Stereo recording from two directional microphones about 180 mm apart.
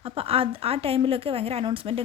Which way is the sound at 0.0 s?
30° right (ahead or behind).